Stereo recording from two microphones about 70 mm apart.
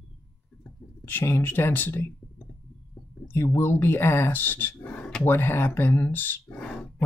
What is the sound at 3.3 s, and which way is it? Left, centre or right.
Speech, left.